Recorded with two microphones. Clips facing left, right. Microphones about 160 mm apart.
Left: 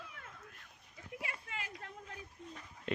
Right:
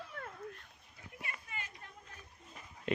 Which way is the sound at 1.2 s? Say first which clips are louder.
Left 1 dB; 90° left.